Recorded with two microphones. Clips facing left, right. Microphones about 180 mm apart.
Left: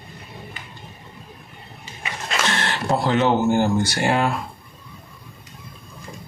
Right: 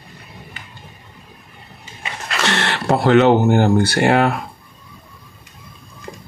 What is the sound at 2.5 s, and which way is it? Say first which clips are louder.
Speech: right 5 dB; 75° right (ahead or behind).